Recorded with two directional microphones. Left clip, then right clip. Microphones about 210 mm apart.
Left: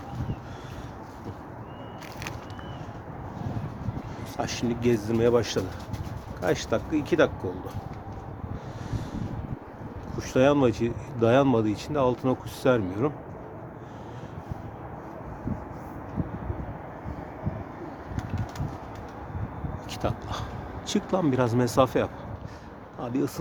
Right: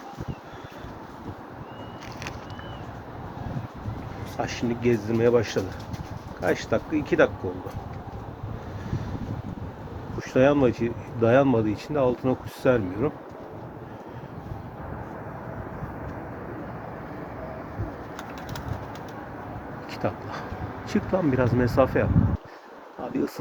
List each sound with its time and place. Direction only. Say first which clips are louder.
4.4 s speech: right 1 dB; 20° left (ahead or behind)
10.2 s speech: right 1 dB; 20° left (ahead or behind)
19.9 s a sound: right 1 dB; 20° left (ahead or behind)
20.9 s speech: right 1 dB; 25° left (ahead or behind)